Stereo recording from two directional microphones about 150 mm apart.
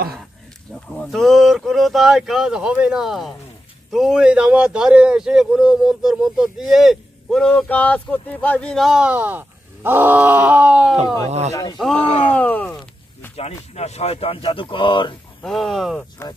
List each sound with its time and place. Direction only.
0.9 s speech: centre (ahead or behind)
11.2 s speech: 45° right (ahead or behind)
12.0 s speech: 40° left (ahead or behind)
12.3 s a sound: 10° left (ahead or behind)
13.7 s speech: 45° left (ahead or behind)
15.4 s speech: centre (ahead or behind)